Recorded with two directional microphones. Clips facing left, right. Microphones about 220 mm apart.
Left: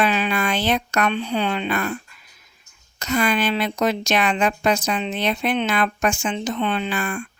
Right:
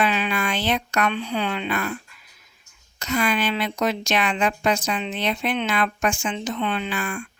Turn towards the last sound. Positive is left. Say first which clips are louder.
# left 3 dB
turn(degrees=40)  # may be behind; listen again after turning